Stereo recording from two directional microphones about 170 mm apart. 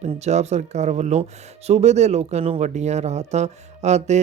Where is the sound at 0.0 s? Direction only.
40° right (ahead or behind).